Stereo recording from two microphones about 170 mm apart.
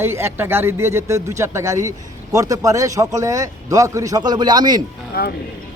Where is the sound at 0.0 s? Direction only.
15° right (ahead or behind).